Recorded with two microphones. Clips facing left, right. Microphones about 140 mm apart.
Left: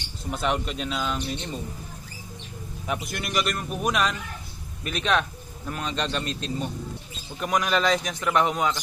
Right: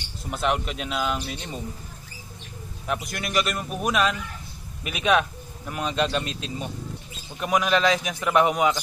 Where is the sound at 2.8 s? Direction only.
Centre (ahead or behind).